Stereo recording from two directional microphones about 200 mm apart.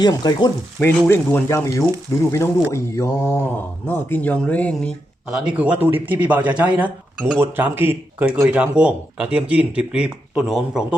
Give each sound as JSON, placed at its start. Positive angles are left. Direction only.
{"t": 0.0, "sound": "frying", "side_deg": 20}
{"t": 0.8, "sound": "speech", "side_deg": 10}
{"t": 5.3, "sound": "a man's voice", "side_deg": -5}